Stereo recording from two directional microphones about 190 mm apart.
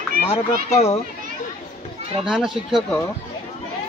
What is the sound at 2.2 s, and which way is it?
Speech, 5° right (ahead or behind).